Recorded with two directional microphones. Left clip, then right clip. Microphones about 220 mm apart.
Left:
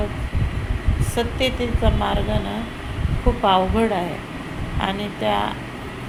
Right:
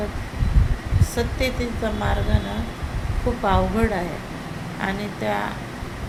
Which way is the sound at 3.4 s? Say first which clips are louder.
Left 4 dB; 5° left (ahead or behind).